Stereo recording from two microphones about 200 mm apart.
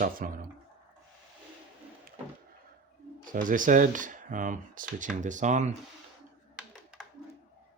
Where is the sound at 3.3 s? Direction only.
40° right (ahead or behind).